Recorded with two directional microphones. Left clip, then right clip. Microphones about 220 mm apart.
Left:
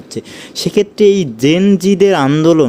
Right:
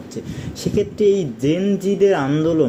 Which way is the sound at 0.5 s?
40° left (ahead or behind).